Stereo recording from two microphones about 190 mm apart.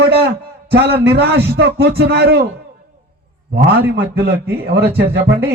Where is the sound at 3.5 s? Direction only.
55° right (ahead or behind).